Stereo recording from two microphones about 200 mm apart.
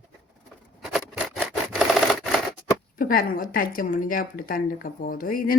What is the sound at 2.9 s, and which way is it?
Speech, 45° left (ahead or behind).